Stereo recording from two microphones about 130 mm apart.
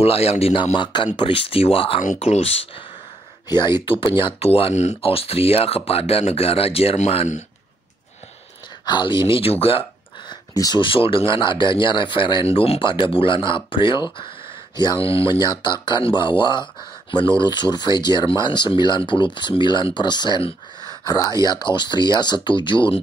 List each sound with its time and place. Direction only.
0.0 s speech: 50° left (ahead or behind)
3.4 s speech: 35° left (ahead or behind); by 7.4 s 60° left (ahead or behind)
8.8 s speech: 35° left (ahead or behind)
9.3 s speech: 50° left (ahead or behind)
10.5 s speech: 25° left (ahead or behind)
10.8 s speech: 40° left (ahead or behind)
15.4 s speech: 35° left (ahead or behind)